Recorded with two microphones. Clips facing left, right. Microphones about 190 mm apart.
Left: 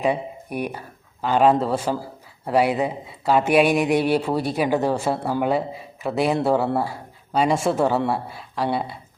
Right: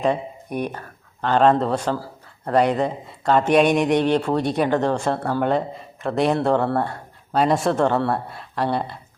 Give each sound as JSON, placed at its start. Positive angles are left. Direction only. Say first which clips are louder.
{"t": 0.0, "sound": "speech", "louder": "right 1 dB", "side_deg": 10}